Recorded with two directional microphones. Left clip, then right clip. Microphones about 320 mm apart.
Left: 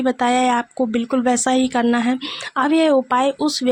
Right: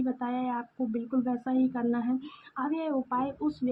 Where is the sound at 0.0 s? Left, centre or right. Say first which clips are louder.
Left 15 dB; left.